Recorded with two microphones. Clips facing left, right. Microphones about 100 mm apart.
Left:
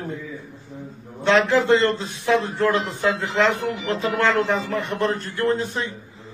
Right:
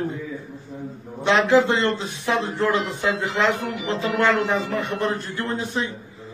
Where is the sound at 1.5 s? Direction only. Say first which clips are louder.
Even; 15° right (ahead or behind).